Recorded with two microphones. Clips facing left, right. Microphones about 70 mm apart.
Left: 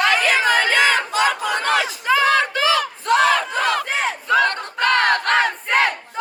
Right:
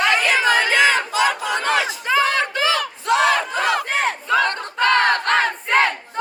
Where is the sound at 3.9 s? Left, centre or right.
Right.